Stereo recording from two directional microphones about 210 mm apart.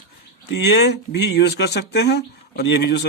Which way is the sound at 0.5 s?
50° left (ahead or behind).